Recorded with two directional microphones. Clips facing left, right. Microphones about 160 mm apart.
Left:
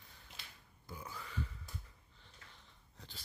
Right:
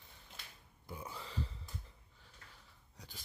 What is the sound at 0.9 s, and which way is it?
Burping, 25° right (ahead or behind).